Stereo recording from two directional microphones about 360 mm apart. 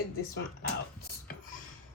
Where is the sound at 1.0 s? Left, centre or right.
Left.